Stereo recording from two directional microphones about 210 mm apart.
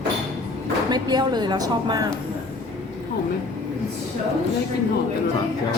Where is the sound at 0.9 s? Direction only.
20° right (ahead or behind).